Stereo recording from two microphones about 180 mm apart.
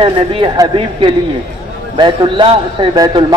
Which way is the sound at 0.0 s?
30° right (ahead or behind).